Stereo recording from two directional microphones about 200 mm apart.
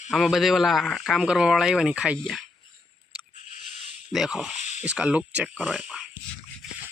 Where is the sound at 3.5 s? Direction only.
40° left (ahead or behind).